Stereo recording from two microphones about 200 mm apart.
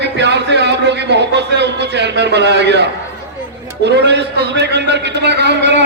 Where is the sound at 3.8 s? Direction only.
60° right (ahead or behind).